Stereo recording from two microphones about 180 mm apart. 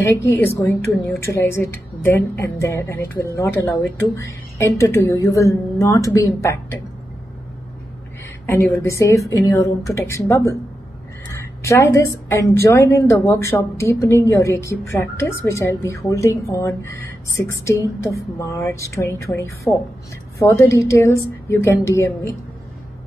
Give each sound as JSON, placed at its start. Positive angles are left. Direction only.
{"t": 0.2, "sound": "a woman's voice", "side_deg": 10}
{"t": 8.5, "sound": "a woman's voice", "side_deg": 10}
{"t": 11.6, "sound": "a woman's voice", "side_deg": 15}